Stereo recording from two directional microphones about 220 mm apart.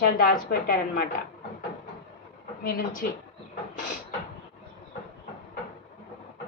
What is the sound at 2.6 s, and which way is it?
Speech, 40° left (ahead or behind).